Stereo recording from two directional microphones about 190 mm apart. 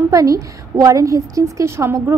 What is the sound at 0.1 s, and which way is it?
A woman's voice, 15° right (ahead or behind).